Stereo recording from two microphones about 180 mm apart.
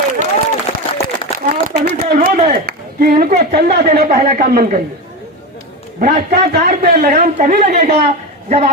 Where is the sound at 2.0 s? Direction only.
40° right (ahead or behind).